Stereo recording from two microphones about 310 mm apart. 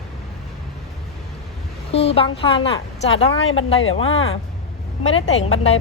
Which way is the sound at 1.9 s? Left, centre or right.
Centre.